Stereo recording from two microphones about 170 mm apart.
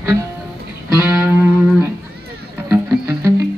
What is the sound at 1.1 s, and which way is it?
Music, 10° right (ahead or behind).